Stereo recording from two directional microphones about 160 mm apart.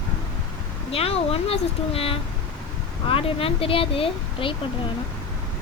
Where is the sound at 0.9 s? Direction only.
35° left (ahead or behind).